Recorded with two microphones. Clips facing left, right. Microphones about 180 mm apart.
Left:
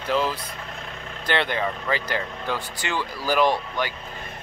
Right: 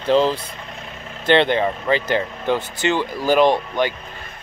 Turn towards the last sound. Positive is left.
turn(degrees=-20)  # may be behind; listen again after turning